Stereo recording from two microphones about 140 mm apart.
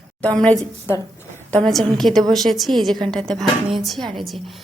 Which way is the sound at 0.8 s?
20° left (ahead or behind).